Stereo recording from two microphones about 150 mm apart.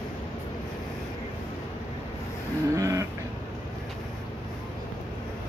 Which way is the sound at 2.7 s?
20° right (ahead or behind).